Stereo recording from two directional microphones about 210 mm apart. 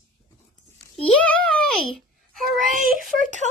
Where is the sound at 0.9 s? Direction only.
5° left (ahead or behind).